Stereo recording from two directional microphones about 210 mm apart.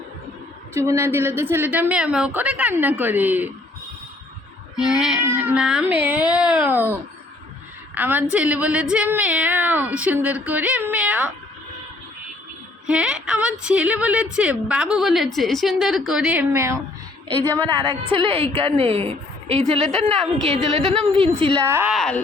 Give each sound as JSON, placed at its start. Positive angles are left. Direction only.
{"t": 0.7, "sound": "a woman's voice", "side_deg": -15}
{"t": 4.8, "sound": "a woman's voice", "side_deg": -5}
{"t": 12.9, "sound": "a woman's voice", "side_deg": -5}
{"t": 17.7, "sound": "a woman's voice", "side_deg": -25}
{"t": 19.8, "sound": "a woman's voice", "side_deg": 5}
{"t": 20.5, "sound": "a woman's voice", "side_deg": -30}
{"t": 21.7, "sound": "a woman's voice", "side_deg": -10}
{"t": 21.9, "sound": "a woman's voice", "side_deg": 5}